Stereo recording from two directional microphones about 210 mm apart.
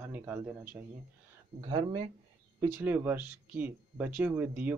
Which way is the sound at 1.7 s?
25° right (ahead or behind).